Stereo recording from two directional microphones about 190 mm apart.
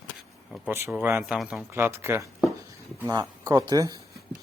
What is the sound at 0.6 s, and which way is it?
Speech, 10° right (ahead or behind).